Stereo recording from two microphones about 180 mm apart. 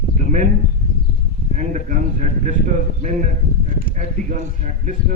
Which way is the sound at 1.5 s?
45° right (ahead or behind).